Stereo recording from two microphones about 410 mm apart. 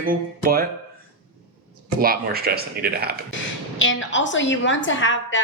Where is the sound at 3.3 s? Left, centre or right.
Left.